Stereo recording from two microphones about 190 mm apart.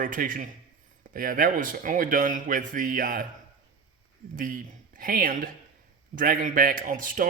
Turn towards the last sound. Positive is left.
turn(degrees=-45)  # may be behind; listen again after turning